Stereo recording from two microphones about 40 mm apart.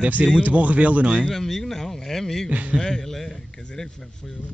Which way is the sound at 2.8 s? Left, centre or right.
Centre.